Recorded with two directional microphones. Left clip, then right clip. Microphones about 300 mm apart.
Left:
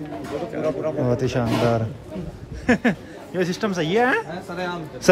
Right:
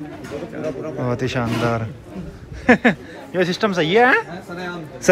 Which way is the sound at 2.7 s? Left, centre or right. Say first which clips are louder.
Right 6 dB; centre.